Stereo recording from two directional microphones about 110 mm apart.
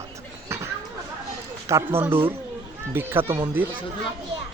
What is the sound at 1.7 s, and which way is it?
Speech, 25° right (ahead or behind).